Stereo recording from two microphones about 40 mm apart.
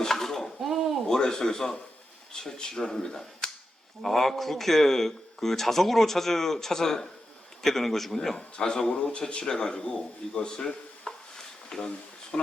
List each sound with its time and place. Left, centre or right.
0.0 s dishes: centre
0.6 s a sound: centre
1.0 s a man's voice: centre
8.4 s speech: left